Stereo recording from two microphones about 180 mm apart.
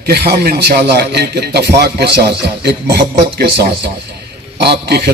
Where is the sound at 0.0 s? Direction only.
60° right (ahead or behind).